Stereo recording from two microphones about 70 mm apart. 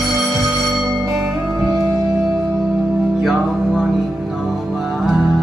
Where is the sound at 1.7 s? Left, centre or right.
Right.